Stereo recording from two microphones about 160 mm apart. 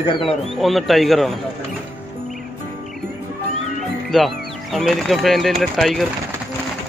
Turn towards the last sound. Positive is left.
turn(degrees=0)  # may be behind; listen again after turning